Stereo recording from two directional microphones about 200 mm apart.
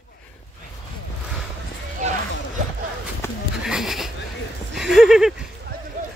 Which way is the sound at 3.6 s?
Centre (ahead or behind).